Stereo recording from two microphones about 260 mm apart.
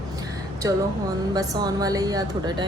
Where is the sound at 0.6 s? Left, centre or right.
Centre.